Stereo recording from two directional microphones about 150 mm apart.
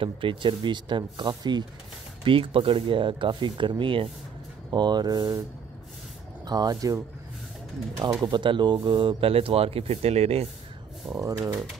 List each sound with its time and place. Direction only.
0.0 s speech: 35° right (ahead or behind)
6.4 s speech: 25° right (ahead or behind)
8.0 s speech: 25° right (ahead or behind); by 10.5 s 45° right (ahead or behind)
11.1 s speech: 25° right (ahead or behind)